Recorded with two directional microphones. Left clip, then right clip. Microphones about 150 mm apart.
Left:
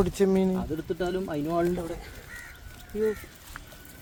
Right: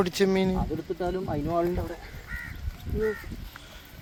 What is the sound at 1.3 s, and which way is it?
Speech, 60° left (ahead or behind).